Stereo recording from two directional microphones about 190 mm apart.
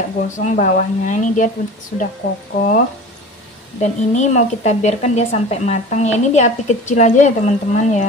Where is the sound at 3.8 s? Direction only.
40° left (ahead or behind).